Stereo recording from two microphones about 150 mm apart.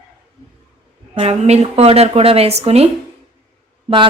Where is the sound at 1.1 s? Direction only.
40° right (ahead or behind).